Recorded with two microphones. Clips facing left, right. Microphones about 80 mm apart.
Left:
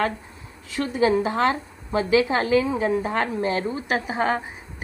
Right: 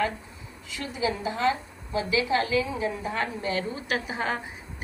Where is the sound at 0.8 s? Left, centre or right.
Left.